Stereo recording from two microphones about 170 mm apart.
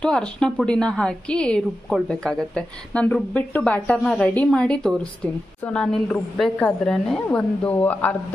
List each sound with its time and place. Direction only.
0.0 s a woman's voice: 5° left (ahead or behind)